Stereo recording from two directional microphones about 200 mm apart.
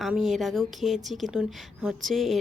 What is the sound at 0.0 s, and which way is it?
Speech, centre (ahead or behind).